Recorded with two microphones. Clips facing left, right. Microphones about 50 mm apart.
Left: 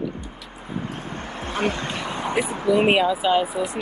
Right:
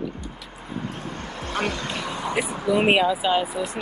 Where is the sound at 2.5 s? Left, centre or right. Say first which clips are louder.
Left 3 dB; left.